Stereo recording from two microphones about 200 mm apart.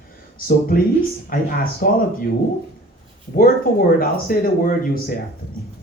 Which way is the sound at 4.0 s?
45° left (ahead or behind).